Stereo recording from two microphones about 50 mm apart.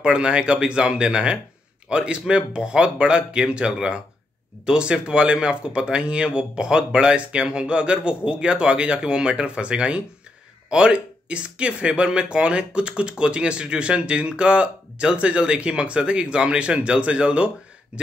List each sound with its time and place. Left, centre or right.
0.0 s speech: centre